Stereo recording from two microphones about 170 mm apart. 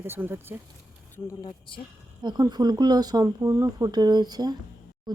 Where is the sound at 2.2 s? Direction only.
25° right (ahead or behind).